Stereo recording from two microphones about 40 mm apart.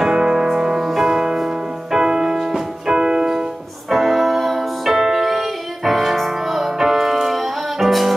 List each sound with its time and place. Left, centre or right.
0.0 s music: centre
3.9 s music: centre